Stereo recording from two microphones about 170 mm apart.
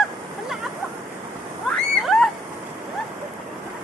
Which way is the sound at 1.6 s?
Centre (ahead or behind).